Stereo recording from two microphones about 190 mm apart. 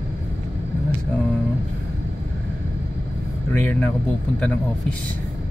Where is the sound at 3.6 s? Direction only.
10° left (ahead or behind).